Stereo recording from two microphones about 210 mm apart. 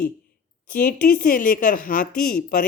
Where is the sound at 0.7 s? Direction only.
45° left (ahead or behind).